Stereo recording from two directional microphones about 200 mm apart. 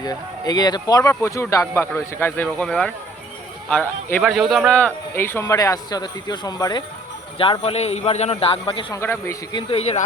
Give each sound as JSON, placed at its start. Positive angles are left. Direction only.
{"t": 0.0, "sound": "a man's voice", "side_deg": 20}
{"t": 9.0, "sound": "a man's voice", "side_deg": 15}